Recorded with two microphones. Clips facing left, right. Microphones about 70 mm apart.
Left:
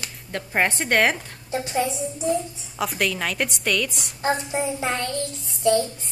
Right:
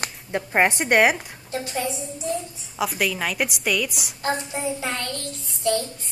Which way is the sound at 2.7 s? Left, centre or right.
Centre.